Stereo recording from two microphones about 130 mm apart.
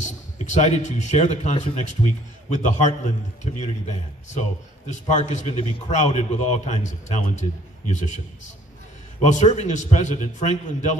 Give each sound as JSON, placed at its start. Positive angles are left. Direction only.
{"t": 0.0, "sound": "a man's voice", "side_deg": 65}
{"t": 7.9, "sound": "a man's voice", "side_deg": 65}
{"t": 9.2, "sound": "a man's voice", "side_deg": 65}